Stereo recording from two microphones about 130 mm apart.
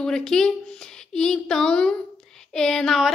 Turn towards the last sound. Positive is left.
turn(degrees=0)  # may be behind; listen again after turning